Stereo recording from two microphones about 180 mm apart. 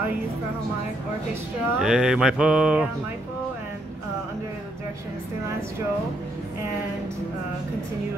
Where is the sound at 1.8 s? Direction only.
5° right (ahead or behind).